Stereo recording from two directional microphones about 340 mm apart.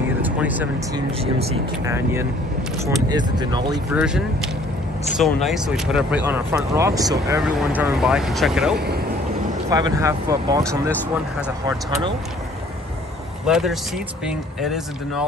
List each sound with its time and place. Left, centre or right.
0.2 s speech: centre
1.2 s speech: centre
5.2 s speech: centre
8.7 s speech: right
9.7 s speech: centre
13.5 s speech: centre